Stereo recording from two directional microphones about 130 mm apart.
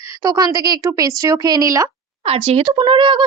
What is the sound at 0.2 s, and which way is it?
Speech, 30° right (ahead or behind).